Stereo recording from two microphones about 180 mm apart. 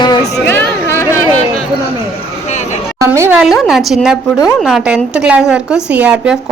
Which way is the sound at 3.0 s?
15° right (ahead or behind).